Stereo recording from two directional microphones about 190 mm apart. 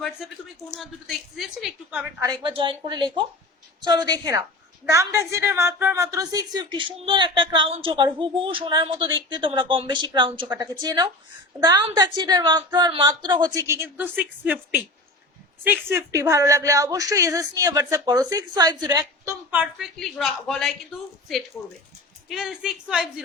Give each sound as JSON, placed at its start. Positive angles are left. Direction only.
{"t": 0.8, "sound": "a woman's voice", "side_deg": 0}
{"t": 2.2, "sound": "a woman's voice", "side_deg": -25}
{"t": 20.0, "sound": "a woman's voice", "side_deg": 0}
{"t": 22.3, "sound": "a woman's voice", "side_deg": 0}